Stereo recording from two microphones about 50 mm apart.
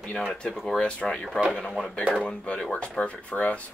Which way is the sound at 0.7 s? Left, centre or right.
Centre.